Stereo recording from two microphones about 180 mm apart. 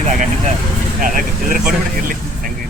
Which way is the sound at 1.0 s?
50° right (ahead or behind).